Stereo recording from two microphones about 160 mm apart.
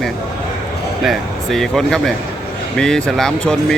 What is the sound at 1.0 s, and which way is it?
Speech, centre (ahead or behind).